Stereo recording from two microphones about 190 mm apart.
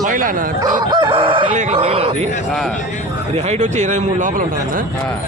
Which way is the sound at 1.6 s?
35° right (ahead or behind).